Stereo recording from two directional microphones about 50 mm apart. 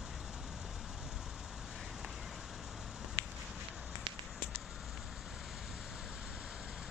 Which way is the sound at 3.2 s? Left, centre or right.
Left.